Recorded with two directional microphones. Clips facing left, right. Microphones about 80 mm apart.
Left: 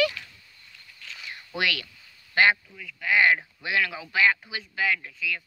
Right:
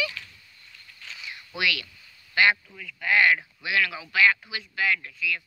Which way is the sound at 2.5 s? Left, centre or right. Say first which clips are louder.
Even; centre.